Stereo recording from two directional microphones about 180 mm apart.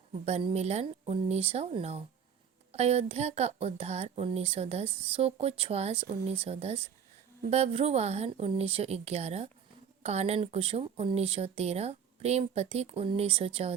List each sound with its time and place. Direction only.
0.3 s speech: 35° right (ahead or behind)